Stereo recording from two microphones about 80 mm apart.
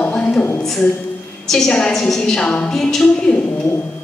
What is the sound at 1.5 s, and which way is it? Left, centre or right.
A woman's voice, centre.